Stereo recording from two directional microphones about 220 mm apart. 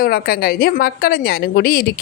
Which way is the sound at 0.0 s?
45° left (ahead or behind).